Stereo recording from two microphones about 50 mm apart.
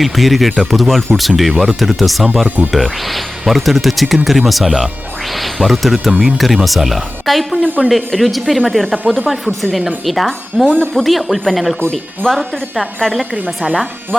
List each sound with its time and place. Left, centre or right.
0.0 s speech: centre
7.5 s a woman's voice: right
7.9 s speech: centre
9.3 s speech: centre
12.2 s a woman's voice: centre